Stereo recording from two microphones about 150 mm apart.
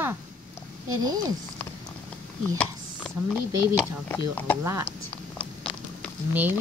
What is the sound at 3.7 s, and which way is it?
Speech, 10° left (ahead or behind).